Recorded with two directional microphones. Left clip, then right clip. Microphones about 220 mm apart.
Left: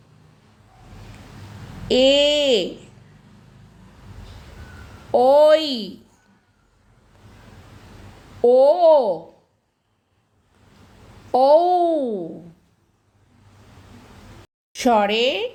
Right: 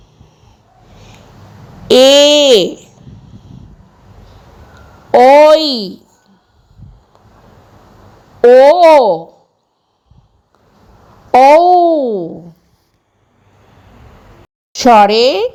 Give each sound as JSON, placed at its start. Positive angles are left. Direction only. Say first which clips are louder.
{"t": 2.0, "sound": "speech", "louder": "right 10 dB", "side_deg": -10}
{"t": 2.2, "sound": "a sound", "louder": "right 11 dB", "side_deg": -35}
{"t": 5.1, "sound": "speech", "louder": "right 9 dB", "side_deg": -25}
{"t": 8.4, "sound": "speech", "louder": "right 9 dB", "side_deg": -25}
{"t": 11.3, "sound": "a child's voice", "louder": "right 9 dB", "side_deg": -25}
{"t": 14.8, "sound": "speech", "louder": "right 11 dB", "side_deg": -35}